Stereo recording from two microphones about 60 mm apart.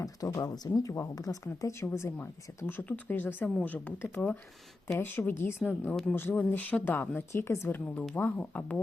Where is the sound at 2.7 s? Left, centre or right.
Left.